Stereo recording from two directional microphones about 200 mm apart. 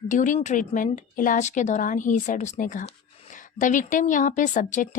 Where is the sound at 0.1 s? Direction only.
40° left (ahead or behind).